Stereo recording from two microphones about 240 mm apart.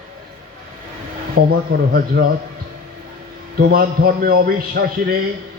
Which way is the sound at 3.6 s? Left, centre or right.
Right.